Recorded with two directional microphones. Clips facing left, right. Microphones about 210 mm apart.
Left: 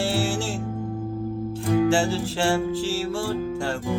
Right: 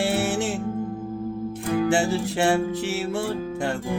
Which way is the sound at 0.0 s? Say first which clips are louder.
Right 1 dB; 20° right (ahead or behind).